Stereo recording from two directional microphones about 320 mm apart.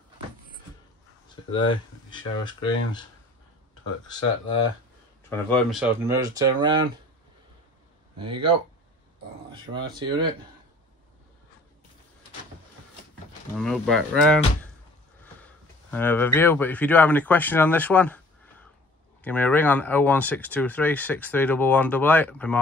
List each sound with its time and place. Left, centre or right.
1.5 s speech: centre
5.3 s speech: centre
8.2 s speech: centre
13.6 s speech: centre
15.9 s speech: centre